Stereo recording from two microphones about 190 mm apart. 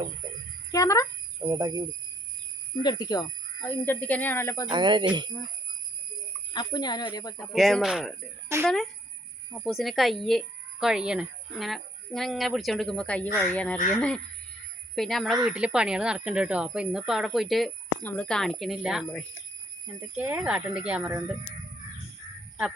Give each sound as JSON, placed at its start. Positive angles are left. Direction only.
{"t": 0.7, "sound": "speech", "side_deg": 15}
{"t": 1.5, "sound": "speech", "side_deg": -20}
{"t": 2.8, "sound": "speech", "side_deg": 20}
{"t": 4.7, "sound": "speech", "side_deg": -25}
{"t": 6.5, "sound": "speech", "side_deg": 20}
{"t": 7.3, "sound": "a woman's voice", "side_deg": 0}
{"t": 14.9, "sound": "a woman's voice", "side_deg": 0}
{"t": 20.1, "sound": "speech", "side_deg": -10}